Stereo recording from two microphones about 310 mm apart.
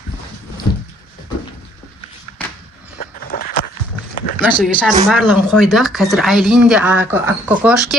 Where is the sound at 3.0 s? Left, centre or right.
Left.